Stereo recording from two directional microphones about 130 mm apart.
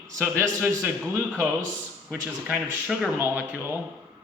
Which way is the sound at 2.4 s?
10° right (ahead or behind).